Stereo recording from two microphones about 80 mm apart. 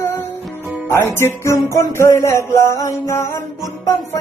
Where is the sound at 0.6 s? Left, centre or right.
Right.